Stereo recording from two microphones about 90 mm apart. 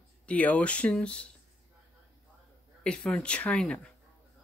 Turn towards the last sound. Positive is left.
turn(degrees=15)  # may be behind; listen again after turning